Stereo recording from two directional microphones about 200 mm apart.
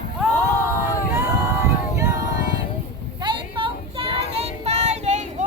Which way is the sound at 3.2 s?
25° right (ahead or behind).